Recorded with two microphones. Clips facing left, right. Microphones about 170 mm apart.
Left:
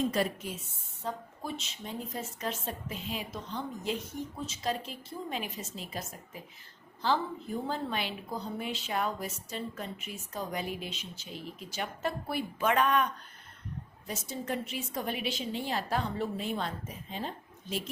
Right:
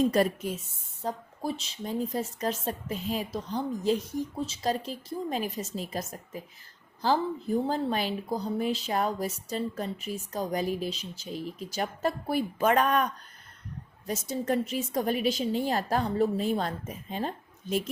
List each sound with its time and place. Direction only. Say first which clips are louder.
0.1 s a woman's voice: right 6 dB; 45° right (ahead or behind)
14.1 s a woman's voice: right 7 dB; 40° right (ahead or behind)